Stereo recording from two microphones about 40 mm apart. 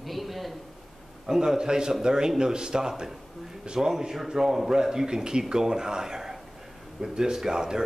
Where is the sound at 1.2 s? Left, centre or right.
Centre.